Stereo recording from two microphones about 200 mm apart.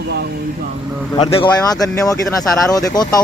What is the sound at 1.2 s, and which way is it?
Speech, 25° left (ahead or behind).